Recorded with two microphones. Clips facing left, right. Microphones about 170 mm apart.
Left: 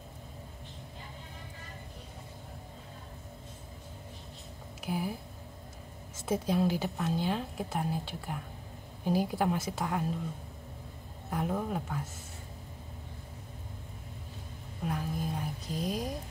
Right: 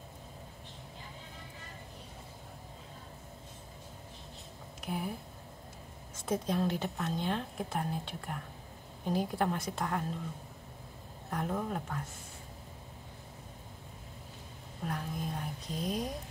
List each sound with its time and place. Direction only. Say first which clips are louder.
4.8 s speech: left 3 dB; 5° left (ahead or behind)
6.2 s speech: left 3 dB; 5° left (ahead or behind)
11.2 s speech: left 2 dB; 5° left (ahead or behind)
14.9 s music: left 3 dB; 5° left (ahead or behind)